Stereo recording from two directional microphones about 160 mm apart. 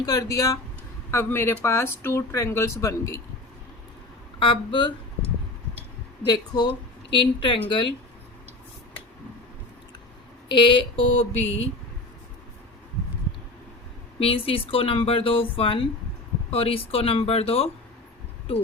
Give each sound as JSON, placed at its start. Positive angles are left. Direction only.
{"t": 0.0, "sound": "a woman's voice", "side_deg": 20}
{"t": 4.4, "sound": "speech", "side_deg": 30}
{"t": 6.2, "sound": "a woman's voice", "side_deg": 30}
{"t": 10.5, "sound": "speech", "side_deg": 30}
{"t": 14.2, "sound": "speech", "side_deg": 35}